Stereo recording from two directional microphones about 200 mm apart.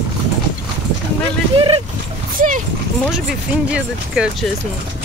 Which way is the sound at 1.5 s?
25° right (ahead or behind).